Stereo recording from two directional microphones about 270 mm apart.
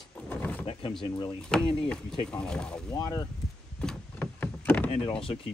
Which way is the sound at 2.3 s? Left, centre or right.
Centre.